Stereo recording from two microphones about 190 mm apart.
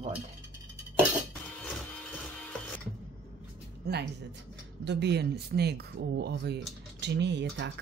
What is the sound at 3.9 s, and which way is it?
Speech, 60° right (ahead or behind).